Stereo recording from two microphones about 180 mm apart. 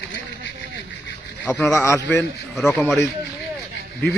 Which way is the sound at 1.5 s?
15° left (ahead or behind).